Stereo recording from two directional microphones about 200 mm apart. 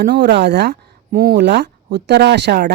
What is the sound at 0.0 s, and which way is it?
Speech, 60° right (ahead or behind).